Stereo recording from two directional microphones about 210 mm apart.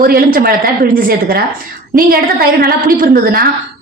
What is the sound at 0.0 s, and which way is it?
A woman's voice, 45° right (ahead or behind).